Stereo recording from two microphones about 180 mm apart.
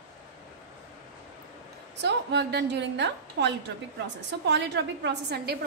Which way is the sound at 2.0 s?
70° right (ahead or behind).